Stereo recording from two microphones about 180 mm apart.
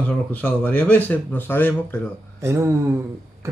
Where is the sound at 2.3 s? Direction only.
15° right (ahead or behind).